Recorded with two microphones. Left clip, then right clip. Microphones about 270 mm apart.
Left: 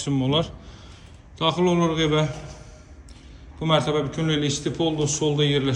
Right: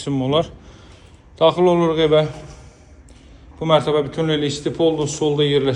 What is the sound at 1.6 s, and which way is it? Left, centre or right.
Speech, centre.